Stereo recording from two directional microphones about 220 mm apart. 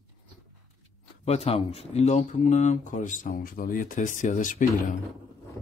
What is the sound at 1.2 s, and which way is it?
Speech, 30° left (ahead or behind).